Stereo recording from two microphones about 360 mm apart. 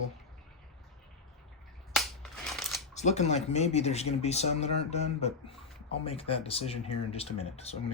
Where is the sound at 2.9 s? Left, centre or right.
Centre.